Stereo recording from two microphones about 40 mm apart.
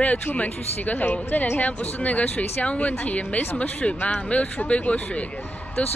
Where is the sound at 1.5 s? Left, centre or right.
Left.